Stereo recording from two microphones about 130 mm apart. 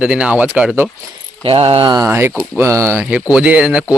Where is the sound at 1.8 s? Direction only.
35° right (ahead or behind).